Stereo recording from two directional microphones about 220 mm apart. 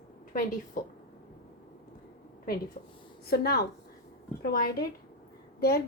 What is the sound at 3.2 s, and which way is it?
A woman's voice, 45° left (ahead or behind).